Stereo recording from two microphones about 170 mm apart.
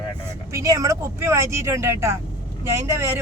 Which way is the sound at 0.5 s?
20° right (ahead or behind).